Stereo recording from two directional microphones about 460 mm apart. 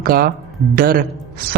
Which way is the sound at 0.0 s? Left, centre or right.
Centre.